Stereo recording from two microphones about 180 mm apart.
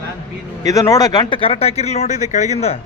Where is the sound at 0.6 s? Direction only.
20° left (ahead or behind); by 2.8 s 35° left (ahead or behind).